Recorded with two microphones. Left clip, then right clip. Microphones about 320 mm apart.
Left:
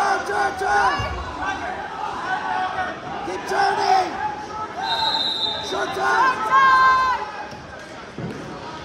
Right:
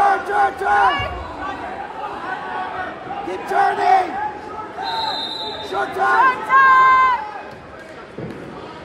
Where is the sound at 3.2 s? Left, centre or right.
Right.